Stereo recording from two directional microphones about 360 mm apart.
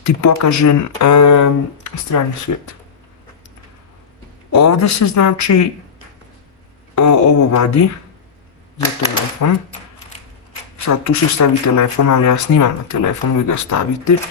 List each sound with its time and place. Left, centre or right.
0.0 s speech: left
4.5 s speech: left
6.9 s speech: left
9.4 s speech: left
10.8 s speech: left